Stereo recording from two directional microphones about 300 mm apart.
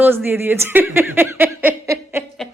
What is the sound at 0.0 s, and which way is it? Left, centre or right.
Speech, centre.